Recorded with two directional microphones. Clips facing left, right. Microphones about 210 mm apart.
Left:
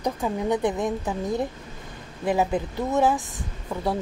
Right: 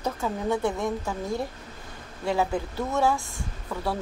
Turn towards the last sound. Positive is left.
turn(degrees=20)  # may be behind; listen again after turning